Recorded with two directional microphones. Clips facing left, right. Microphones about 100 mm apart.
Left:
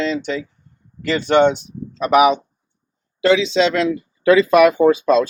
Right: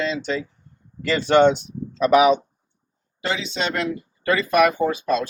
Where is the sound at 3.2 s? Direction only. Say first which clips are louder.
Left 11 dB; 90° left.